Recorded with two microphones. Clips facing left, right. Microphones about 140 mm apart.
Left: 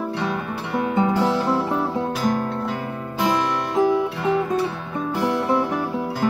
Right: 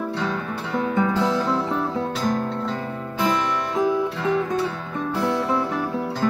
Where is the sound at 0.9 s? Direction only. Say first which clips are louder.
Left 2 dB; 20° left (ahead or behind).